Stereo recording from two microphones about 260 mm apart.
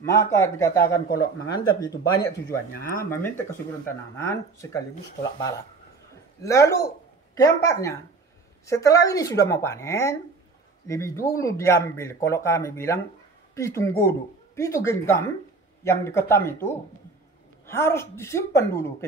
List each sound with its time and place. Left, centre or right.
0.0 s speech: centre
0.9 s speech: left
1.5 s speech: centre
6.4 s speech: centre